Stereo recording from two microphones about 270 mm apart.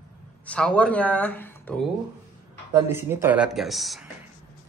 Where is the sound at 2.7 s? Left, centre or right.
Centre.